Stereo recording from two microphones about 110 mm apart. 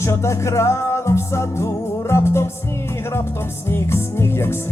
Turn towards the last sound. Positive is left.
turn(degrees=25)  # may be behind; listen again after turning